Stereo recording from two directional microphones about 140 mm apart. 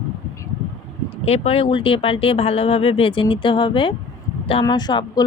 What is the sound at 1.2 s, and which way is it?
Speech, 45° left (ahead or behind).